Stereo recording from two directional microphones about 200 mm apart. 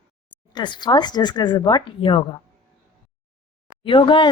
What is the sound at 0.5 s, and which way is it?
Speech, 20° left (ahead or behind).